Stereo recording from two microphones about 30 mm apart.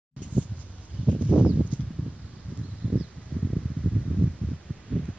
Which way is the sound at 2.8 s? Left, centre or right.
Right.